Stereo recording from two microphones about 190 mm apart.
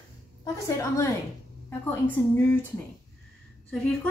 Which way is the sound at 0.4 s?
15° left (ahead or behind).